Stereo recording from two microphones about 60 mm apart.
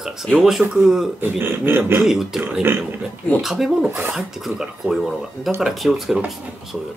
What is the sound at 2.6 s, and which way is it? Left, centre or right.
Speech, right.